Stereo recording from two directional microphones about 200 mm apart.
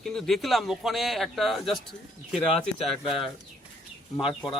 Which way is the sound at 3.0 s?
25° left (ahead or behind).